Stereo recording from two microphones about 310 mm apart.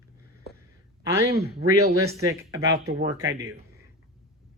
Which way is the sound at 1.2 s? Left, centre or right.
Right.